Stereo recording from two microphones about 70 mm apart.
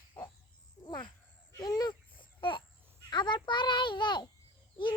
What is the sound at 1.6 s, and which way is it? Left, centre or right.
Speech, left.